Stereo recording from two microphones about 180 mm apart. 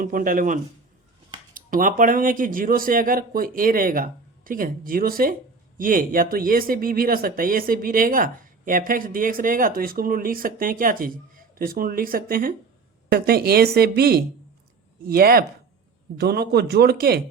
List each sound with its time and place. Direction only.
0.0 s speech: 50° right (ahead or behind)